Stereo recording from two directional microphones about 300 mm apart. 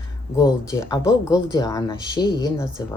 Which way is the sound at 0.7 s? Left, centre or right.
Centre.